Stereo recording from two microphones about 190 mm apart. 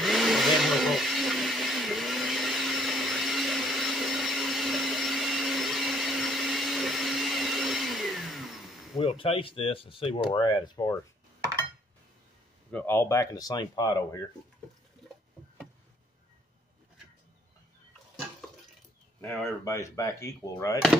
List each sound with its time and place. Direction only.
0.0 s blender: centre (ahead or behind)
8.9 s speech: 30° left (ahead or behind)
12.7 s speech: 10° left (ahead or behind)
19.2 s speech: 15° left (ahead or behind)